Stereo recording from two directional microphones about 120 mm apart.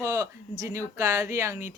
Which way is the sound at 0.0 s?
25° right (ahead or behind).